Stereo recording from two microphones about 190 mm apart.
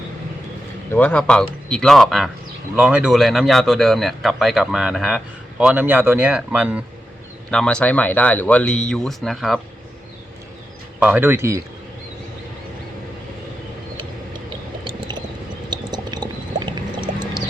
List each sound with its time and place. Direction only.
0.9 s speech: 10° left (ahead or behind); by 6.8 s 5° right (ahead or behind)
7.5 s speech: 5° left (ahead or behind)
11.0 s speech: 10° right (ahead or behind)
15.7 s boiling: 20° right (ahead or behind)